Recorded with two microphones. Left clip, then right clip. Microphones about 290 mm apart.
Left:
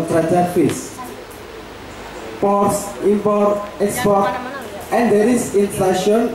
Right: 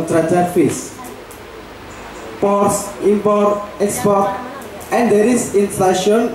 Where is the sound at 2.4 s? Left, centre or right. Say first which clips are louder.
Right 1 dB; centre.